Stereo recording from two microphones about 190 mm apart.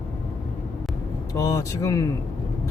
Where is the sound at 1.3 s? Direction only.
15° left (ahead or behind).